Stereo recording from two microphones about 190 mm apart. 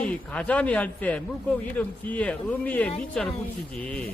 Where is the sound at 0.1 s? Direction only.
5° left (ahead or behind).